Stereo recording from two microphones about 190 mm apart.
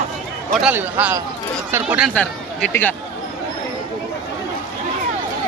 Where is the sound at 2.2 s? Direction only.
10° left (ahead or behind).